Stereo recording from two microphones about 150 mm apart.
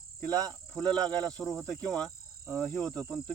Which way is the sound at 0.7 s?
5° left (ahead or behind).